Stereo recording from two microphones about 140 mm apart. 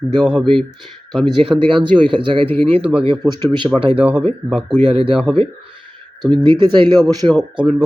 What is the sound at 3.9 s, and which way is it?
Speech, 10° right (ahead or behind).